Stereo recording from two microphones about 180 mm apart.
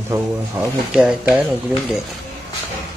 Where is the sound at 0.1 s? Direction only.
15° right (ahead or behind).